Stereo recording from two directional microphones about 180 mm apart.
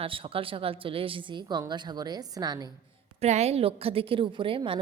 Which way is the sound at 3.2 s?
35° right (ahead or behind).